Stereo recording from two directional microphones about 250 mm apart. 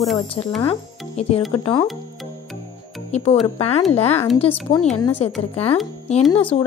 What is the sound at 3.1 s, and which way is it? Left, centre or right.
Speech, left.